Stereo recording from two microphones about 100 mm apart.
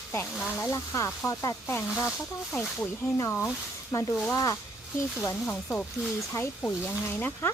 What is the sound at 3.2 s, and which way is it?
Speech, 25° left (ahead or behind).